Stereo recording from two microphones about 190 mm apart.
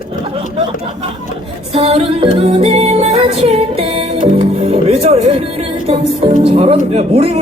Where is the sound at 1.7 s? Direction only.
30° right (ahead or behind).